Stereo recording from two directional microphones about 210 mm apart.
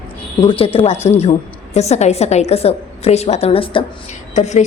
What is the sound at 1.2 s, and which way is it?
A woman's voice, 30° left (ahead or behind).